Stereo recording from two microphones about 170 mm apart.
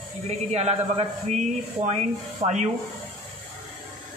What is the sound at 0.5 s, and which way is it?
Speech, 40° right (ahead or behind).